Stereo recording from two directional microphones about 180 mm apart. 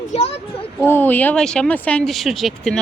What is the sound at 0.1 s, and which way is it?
Speech, 35° left (ahead or behind).